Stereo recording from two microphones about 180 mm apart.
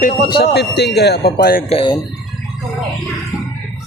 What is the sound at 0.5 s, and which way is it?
Speech, 65° left (ahead or behind).